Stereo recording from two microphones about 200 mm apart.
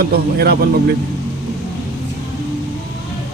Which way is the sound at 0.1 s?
50° right (ahead or behind).